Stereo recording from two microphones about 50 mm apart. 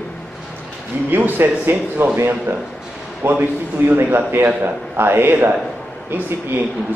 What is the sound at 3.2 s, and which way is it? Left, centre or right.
Speech, right.